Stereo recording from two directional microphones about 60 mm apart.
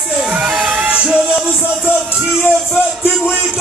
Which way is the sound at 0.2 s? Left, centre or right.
Centre.